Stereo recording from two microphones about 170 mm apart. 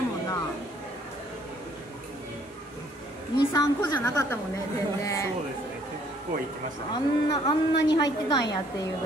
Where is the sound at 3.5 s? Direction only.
15° left (ahead or behind).